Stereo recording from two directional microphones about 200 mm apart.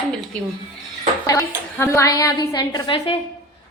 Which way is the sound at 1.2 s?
15° left (ahead or behind).